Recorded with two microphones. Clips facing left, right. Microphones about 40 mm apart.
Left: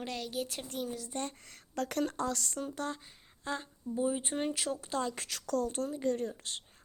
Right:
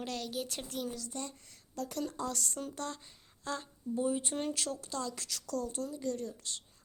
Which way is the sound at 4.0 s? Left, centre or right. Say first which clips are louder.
Left 1 dB; centre.